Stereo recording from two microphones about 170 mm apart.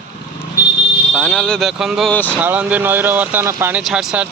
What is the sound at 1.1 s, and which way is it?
A man's voice, 5° left (ahead or behind).